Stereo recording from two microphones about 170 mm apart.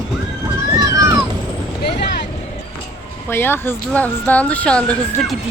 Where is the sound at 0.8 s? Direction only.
20° right (ahead or behind).